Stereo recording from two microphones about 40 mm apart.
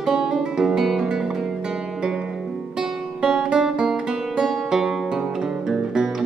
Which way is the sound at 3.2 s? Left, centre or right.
Centre.